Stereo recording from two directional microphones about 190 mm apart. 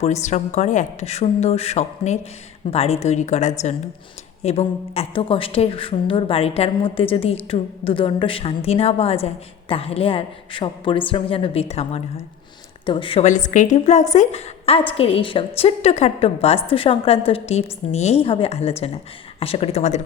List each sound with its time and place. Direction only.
0.0 s a woman's voice: 35° left (ahead or behind)